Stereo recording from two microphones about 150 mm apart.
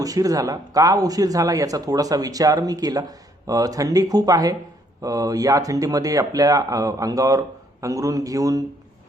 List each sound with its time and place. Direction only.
0.0 s speech: 25° right (ahead or behind)